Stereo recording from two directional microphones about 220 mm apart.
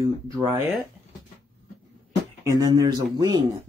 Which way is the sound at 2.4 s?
15° right (ahead or behind).